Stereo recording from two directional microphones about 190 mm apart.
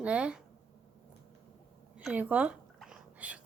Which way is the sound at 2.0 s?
5° right (ahead or behind).